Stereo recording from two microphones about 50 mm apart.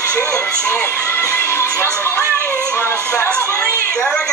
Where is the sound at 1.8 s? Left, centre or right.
Left.